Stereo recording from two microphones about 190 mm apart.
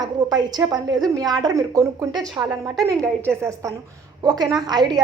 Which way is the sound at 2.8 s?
5° left (ahead or behind).